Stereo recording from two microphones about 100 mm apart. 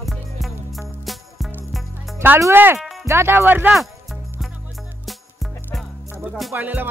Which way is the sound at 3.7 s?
Centre (ahead or behind).